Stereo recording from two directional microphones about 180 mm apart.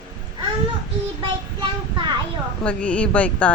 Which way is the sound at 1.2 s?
25° right (ahead or behind).